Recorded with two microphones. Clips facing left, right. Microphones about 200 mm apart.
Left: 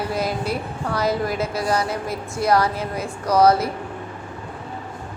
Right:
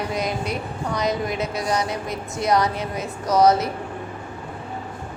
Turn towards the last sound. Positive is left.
turn(degrees=-20)  # may be behind; listen again after turning